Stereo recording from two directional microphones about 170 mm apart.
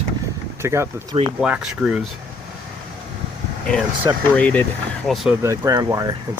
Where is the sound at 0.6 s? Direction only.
15° right (ahead or behind).